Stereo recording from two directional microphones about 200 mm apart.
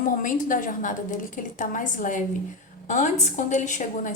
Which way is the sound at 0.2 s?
40° left (ahead or behind).